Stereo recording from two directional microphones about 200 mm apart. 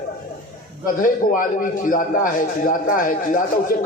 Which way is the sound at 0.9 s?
45° left (ahead or behind).